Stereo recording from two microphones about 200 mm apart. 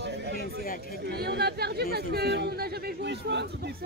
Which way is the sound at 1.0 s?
55° right (ahead or behind).